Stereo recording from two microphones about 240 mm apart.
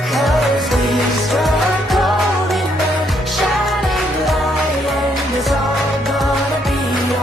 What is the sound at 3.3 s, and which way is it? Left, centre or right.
Music, centre.